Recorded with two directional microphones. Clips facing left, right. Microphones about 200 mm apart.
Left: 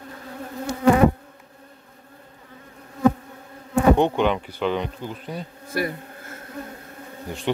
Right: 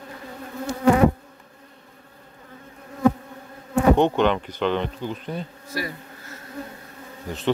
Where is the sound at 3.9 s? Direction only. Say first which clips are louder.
Right 1 dB; 10° left (ahead or behind).